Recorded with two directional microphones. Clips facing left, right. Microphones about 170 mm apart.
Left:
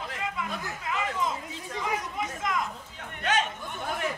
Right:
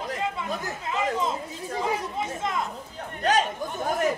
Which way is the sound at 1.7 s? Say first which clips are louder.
Right 4 dB; 30° right (ahead or behind).